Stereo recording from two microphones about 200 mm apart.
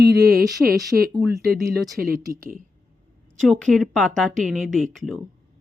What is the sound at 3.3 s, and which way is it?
Speech, centre (ahead or behind).